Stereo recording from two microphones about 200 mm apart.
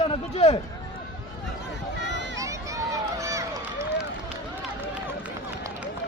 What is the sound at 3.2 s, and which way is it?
Run, 15° right (ahead or behind).